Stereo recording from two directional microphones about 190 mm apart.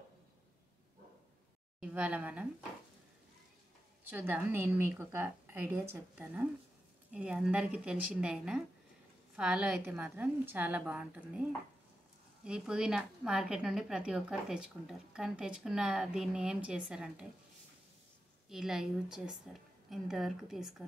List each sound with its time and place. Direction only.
1.8 s a woman's voice: 5° right (ahead or behind)
4.1 s a woman's voice: 10° right (ahead or behind)
12.4 s a woman's voice: 5° right (ahead or behind)
18.5 s a woman's voice: centre (ahead or behind)